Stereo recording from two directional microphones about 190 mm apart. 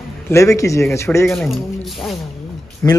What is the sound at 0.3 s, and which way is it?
Speech, 15° left (ahead or behind).